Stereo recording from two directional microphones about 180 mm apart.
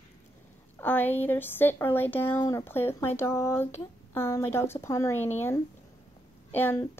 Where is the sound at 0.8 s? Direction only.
10° left (ahead or behind).